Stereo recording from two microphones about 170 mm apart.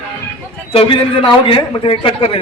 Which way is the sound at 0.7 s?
30° left (ahead or behind).